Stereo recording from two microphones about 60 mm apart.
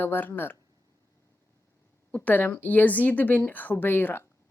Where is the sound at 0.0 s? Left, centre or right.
Left.